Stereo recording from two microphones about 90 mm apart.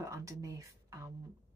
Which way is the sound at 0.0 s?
35° right (ahead or behind).